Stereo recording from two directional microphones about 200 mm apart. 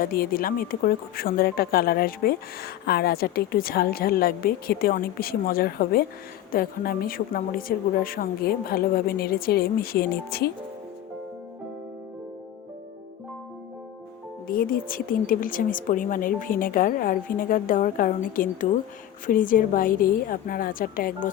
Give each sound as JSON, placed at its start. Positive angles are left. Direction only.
{"t": 0.0, "sound": "a woman's voice", "side_deg": 45}
{"t": 14.4, "sound": "a woman's voice", "side_deg": 45}